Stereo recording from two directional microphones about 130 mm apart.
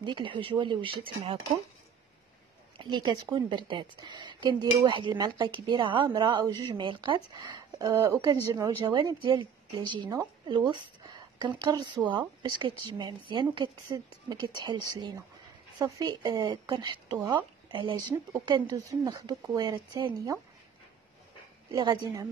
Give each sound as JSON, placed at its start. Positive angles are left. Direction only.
{"t": 0.0, "sound": "a woman's voice", "side_deg": -40}
{"t": 2.8, "sound": "a woman's voice", "side_deg": -35}
{"t": 21.7, "sound": "a woman's voice", "side_deg": -35}